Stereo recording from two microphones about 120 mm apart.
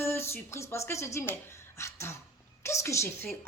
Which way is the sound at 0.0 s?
20° left (ahead or behind).